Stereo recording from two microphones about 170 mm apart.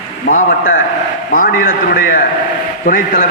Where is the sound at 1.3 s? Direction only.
55° left (ahead or behind).